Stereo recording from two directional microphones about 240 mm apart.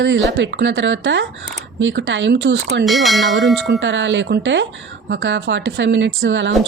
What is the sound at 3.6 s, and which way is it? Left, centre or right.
A woman's voice, right.